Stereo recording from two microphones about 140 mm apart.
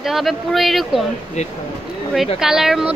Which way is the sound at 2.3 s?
5° right (ahead or behind).